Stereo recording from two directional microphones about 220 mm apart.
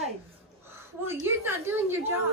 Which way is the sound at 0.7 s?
10° right (ahead or behind).